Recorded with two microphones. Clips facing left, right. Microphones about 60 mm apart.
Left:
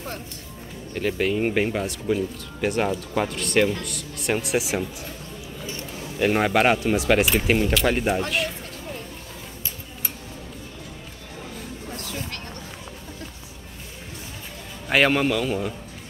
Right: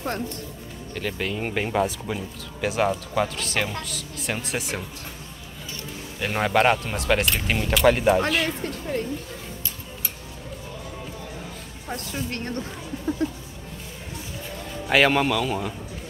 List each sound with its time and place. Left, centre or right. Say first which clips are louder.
0.9 s speech: left 5 dB; centre
6.1 s speech: left 2 dB; centre
11.9 s music: right 5 dB; right
14.9 s speech: even; centre